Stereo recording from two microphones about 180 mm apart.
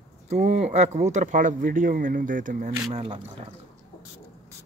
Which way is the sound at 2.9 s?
30° right (ahead or behind).